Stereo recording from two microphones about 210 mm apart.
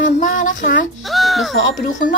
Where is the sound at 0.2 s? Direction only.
40° left (ahead or behind).